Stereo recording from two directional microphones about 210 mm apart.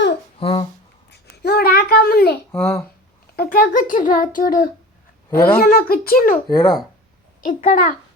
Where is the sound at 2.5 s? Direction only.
10° left (ahead or behind).